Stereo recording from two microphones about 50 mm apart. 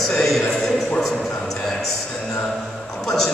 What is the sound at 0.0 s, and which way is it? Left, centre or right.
Speech, centre.